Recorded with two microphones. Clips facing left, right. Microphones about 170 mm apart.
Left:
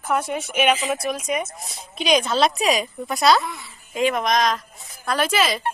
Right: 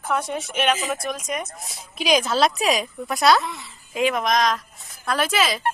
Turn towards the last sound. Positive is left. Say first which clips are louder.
# left 1 dB
turn(degrees=0)  # may be behind; listen again after turning